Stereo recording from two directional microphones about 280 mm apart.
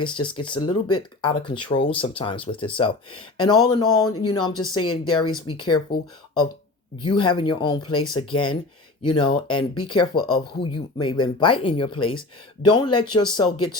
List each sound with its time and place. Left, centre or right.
0.0 s speech: centre
7.0 s speech: centre